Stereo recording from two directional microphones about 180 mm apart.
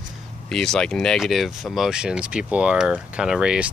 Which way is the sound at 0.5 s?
5° left (ahead or behind).